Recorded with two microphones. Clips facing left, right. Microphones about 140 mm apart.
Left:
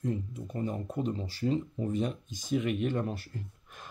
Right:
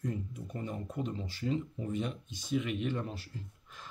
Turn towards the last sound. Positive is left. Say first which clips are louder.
# left 3 dB
turn(degrees=50)  # may be behind; listen again after turning